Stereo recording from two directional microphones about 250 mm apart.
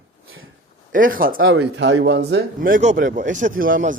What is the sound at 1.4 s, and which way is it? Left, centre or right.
Speech, right.